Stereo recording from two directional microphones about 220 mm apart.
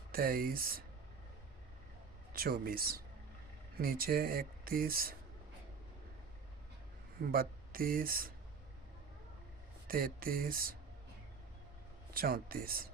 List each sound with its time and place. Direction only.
0.1 s speech: 40° right (ahead or behind)
2.3 s speech: 40° right (ahead or behind)
7.3 s speech: 40° right (ahead or behind)
9.8 s speech: 40° right (ahead or behind)
12.1 s speech: 40° right (ahead or behind)